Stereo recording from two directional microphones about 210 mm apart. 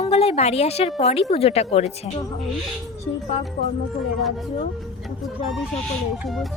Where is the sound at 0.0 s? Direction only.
30° left (ahead or behind).